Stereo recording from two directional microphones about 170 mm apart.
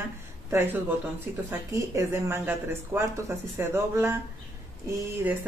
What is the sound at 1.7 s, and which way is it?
Speech, 20° right (ahead or behind).